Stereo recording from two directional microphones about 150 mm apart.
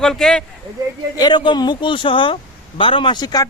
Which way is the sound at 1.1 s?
30° left (ahead or behind).